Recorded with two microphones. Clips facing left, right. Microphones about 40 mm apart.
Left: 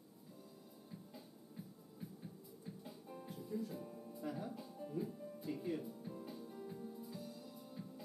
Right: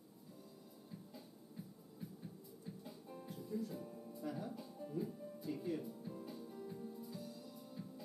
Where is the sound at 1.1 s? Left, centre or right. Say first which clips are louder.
Even; centre.